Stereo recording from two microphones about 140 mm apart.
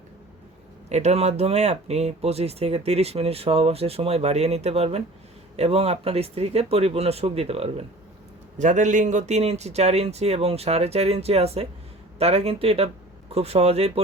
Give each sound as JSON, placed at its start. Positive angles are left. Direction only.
{"t": 0.9, "sound": "speech", "side_deg": -50}
{"t": 8.5, "sound": "speech", "side_deg": -60}